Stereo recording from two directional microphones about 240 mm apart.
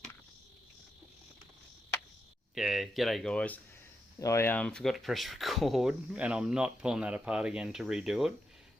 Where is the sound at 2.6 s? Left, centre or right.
Centre.